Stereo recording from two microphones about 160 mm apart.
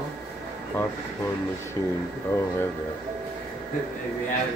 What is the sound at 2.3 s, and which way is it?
Speech, 15° left (ahead or behind).